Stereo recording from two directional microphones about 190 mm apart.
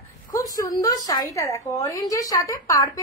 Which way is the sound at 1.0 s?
20° left (ahead or behind).